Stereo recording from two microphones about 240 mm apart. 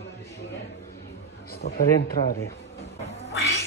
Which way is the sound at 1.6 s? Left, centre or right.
Left.